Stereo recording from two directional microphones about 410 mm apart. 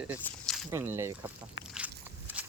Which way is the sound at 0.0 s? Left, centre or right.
Centre.